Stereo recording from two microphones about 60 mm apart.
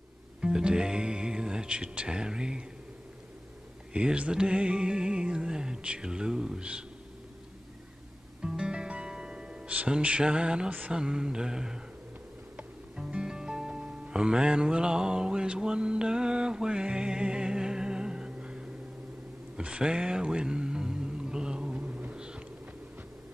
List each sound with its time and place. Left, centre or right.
0.4 s music: centre
3.9 s music: centre
8.4 s music: centre
12.9 s music: centre